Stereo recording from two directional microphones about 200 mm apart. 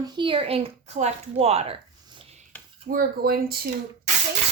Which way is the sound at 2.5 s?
10° left (ahead or behind).